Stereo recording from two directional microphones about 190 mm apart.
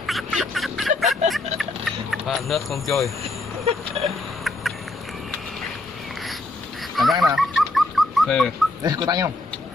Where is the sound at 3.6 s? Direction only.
30° right (ahead or behind).